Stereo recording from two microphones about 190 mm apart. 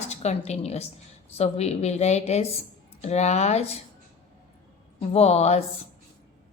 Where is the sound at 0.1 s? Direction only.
35° left (ahead or behind).